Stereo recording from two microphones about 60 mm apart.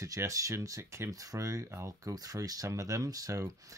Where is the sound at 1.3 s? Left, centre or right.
Right.